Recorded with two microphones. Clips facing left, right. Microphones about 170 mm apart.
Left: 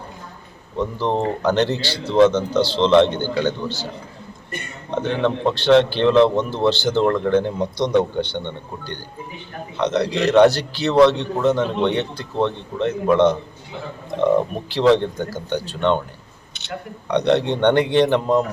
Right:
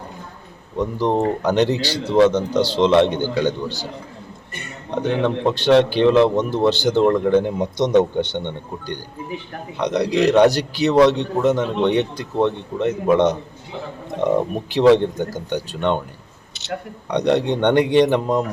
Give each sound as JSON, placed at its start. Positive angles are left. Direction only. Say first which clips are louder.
{"t": 0.8, "sound": "a man's voice", "louder": "right 2 dB", "side_deg": -15}
{"t": 4.9, "sound": "a man's voice", "louder": "right 1 dB", "side_deg": -15}
{"t": 14.8, "sound": "a man's voice", "louder": "right 2 dB", "side_deg": -15}
{"t": 17.1, "sound": "a man's voice", "louder": "even", "side_deg": -15}